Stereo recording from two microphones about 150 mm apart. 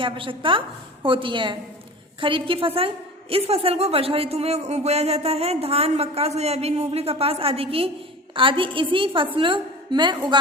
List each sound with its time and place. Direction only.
0.0 s a woman's voice: 35° right (ahead or behind)